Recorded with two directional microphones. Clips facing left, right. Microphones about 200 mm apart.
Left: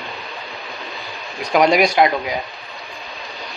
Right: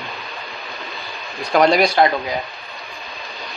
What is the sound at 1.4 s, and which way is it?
Speech, 15° left (ahead or behind).